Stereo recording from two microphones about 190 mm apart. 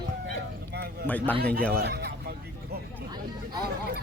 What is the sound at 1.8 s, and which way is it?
Speech, 55° right (ahead or behind).